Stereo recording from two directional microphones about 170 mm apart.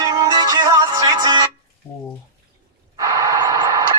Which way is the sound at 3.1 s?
20° right (ahead or behind).